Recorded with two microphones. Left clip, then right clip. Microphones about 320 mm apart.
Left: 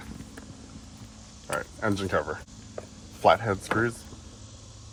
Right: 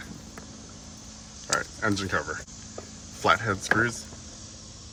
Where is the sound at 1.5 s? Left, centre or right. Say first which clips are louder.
Right 2 dB; centre.